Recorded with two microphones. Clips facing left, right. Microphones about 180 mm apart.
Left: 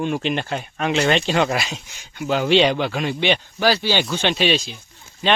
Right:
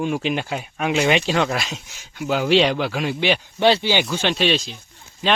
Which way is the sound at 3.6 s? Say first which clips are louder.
Right 2 dB; 20° right (ahead or behind).